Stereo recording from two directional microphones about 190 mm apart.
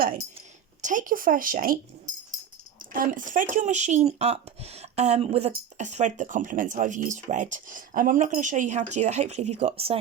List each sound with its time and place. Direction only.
0.8 s speech: 40° right (ahead or behind)
2.9 s speech: 45° right (ahead or behind)